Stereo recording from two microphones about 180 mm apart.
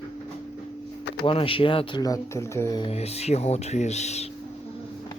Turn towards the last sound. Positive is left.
turn(degrees=40)  # may be behind; listen again after turning